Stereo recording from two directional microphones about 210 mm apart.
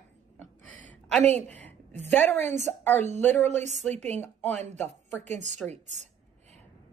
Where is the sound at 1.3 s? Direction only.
10° left (ahead or behind).